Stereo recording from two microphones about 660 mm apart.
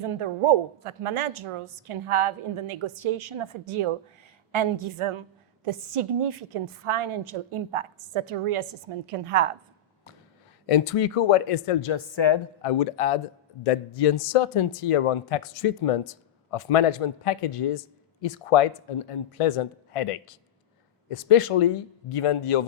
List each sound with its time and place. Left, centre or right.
0.0 s a woman's voice: right
10.7 s speech: left